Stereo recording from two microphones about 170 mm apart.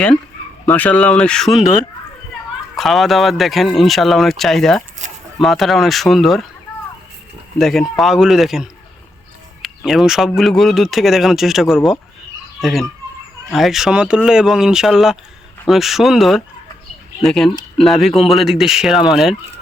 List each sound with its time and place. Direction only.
0.6 s speech: 10° left (ahead or behind)
5.0 s a sound: 45° right (ahead or behind)
5.4 s speech: centre (ahead or behind)
7.6 s speech: centre (ahead or behind)